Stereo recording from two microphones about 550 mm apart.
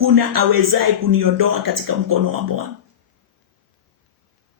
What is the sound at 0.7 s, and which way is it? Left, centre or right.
A man's voice, right.